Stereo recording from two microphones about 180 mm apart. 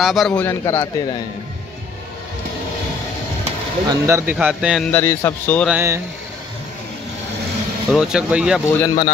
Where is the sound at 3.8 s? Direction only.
15° right (ahead or behind).